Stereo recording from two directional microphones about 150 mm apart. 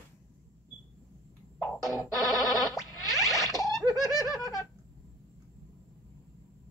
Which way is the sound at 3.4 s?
20° left (ahead or behind).